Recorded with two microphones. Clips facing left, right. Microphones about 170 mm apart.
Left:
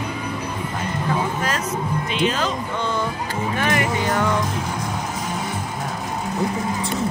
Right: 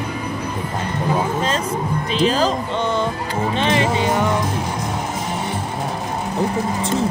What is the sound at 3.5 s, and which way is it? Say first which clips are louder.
Speech: right 3 dB; 25° right (ahead or behind).